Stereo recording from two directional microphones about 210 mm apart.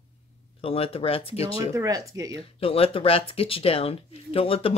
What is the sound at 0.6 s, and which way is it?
Speech, 25° left (ahead or behind).